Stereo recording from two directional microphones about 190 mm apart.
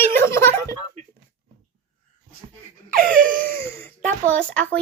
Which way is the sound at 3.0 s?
45° right (ahead or behind).